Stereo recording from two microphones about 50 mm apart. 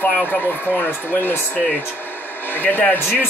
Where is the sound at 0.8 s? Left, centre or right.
Left.